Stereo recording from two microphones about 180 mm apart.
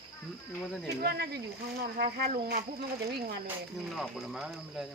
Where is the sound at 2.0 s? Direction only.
50° right (ahead or behind).